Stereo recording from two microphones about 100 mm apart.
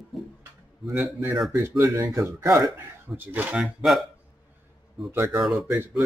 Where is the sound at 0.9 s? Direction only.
20° right (ahead or behind).